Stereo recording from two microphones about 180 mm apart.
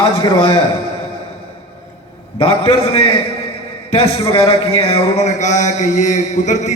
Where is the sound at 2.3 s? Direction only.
30° left (ahead or behind).